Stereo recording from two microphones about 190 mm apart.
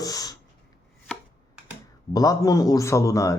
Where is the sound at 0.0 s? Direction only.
20° left (ahead or behind).